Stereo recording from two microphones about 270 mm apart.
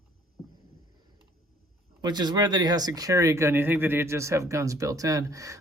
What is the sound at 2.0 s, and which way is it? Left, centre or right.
Speech, centre.